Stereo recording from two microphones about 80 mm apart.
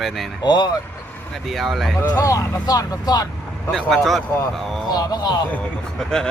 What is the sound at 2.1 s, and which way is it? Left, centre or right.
Speech, left.